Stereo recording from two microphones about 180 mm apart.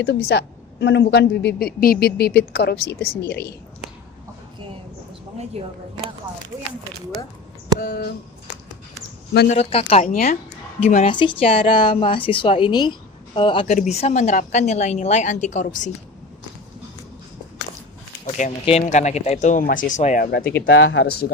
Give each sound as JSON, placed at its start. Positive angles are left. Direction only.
{"t": 0.0, "sound": "a woman's voice", "side_deg": 65}
{"t": 5.6, "sound": "speech", "side_deg": -35}
{"t": 7.8, "sound": "a woman's voice", "side_deg": 60}
{"t": 9.5, "sound": "a woman's voice", "side_deg": 35}
{"t": 10.0, "sound": "a woman's voice", "side_deg": 50}
{"t": 10.8, "sound": "a woman's voice", "side_deg": 35}
{"t": 13.7, "sound": "a woman's voice", "side_deg": 40}
{"t": 18.3, "sound": "a woman's voice", "side_deg": 40}
{"t": 20.6, "sound": "speech", "side_deg": 90}